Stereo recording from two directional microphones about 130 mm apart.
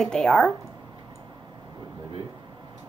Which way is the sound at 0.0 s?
5° left (ahead or behind).